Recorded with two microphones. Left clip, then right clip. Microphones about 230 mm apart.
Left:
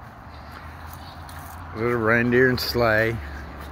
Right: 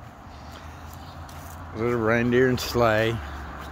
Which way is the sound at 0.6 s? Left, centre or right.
Right.